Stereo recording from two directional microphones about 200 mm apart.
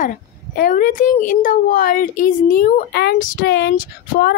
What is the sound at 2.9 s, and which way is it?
Speech, 55° left (ahead or behind).